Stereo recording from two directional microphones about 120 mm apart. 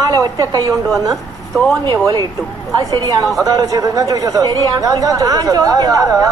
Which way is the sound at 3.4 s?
30° right (ahead or behind).